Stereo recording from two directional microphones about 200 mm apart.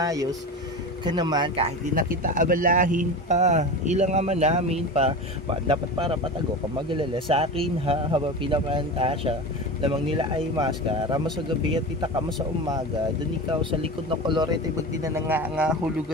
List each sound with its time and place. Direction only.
0.0 s speech: 20° right (ahead or behind)
2.0 s speech: 45° right (ahead or behind); by 11.3 s 25° right (ahead or behind)
14.2 s speech: 25° right (ahead or behind)
15.0 s speech: 10° right (ahead or behind)